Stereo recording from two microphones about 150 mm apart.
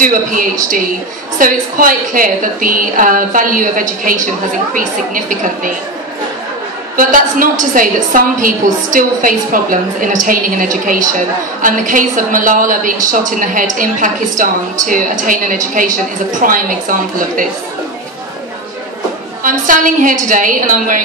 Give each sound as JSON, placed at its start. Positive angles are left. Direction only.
{"t": 0.0, "sound": "a woman's voice", "side_deg": -65}
{"t": 7.0, "sound": "a woman's voice", "side_deg": -65}
{"t": 19.4, "sound": "a woman's voice", "side_deg": -65}